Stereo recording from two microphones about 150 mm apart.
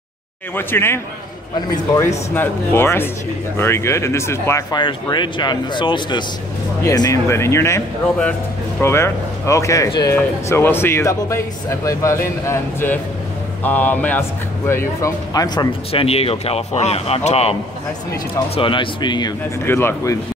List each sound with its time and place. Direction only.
0.6 s speech: 15° left (ahead or behind)
15.9 s a man's voice: 40° left (ahead or behind)
19.6 s speech: 15° left (ahead or behind)